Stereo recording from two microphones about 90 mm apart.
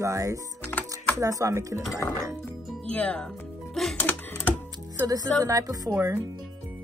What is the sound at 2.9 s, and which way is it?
Speech, 15° left (ahead or behind).